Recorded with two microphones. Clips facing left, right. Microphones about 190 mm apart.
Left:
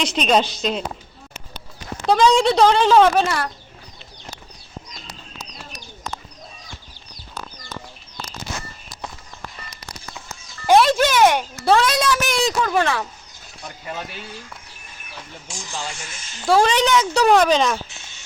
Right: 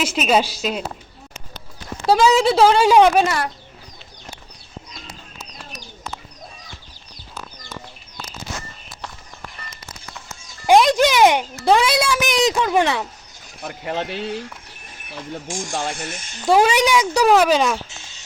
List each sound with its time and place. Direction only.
0.0 s speech: 5° right (ahead or behind)
2.0 s speech: 5° right (ahead or behind)
10.7 s speech: 15° right (ahead or behind)
13.6 s speech: 65° right (ahead or behind)
15.4 s speech: 50° right (ahead or behind)
16.4 s speech: 20° right (ahead or behind)